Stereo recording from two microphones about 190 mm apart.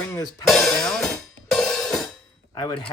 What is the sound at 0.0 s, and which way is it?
Music, 15° left (ahead or behind).